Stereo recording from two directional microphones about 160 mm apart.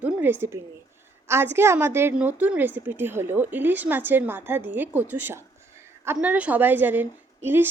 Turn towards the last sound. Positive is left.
turn(degrees=-15)  # may be behind; listen again after turning